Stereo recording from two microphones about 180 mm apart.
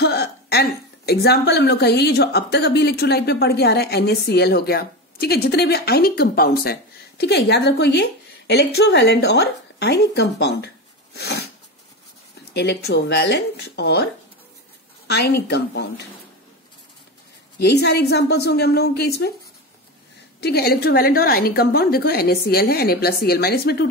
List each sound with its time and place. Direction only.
0.0 s a woman's voice: 65° left (ahead or behind)
12.5 s speech: 65° left (ahead or behind)
15.0 s a woman's voice: 65° left (ahead or behind)
17.6 s a woman's voice: 65° left (ahead or behind)
20.3 s a woman's voice: 60° left (ahead or behind)